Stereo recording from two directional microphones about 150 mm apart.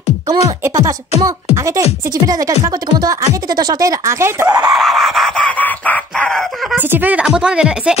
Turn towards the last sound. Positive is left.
turn(degrees=-5)  # may be behind; listen again after turning